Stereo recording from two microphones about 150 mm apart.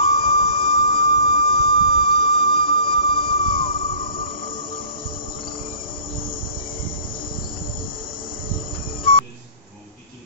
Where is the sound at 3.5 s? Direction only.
35° left (ahead or behind).